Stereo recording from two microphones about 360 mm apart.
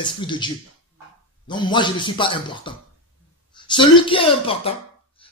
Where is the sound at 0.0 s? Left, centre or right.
Centre.